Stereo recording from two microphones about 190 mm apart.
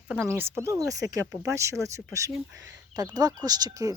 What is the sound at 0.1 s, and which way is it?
Speech, 10° right (ahead or behind).